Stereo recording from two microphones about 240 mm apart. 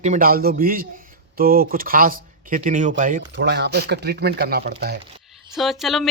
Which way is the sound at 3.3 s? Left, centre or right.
Right.